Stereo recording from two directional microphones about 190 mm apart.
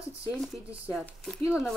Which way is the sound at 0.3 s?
5° right (ahead or behind).